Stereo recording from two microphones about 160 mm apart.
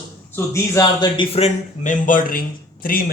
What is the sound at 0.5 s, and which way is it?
Speech, 20° left (ahead or behind).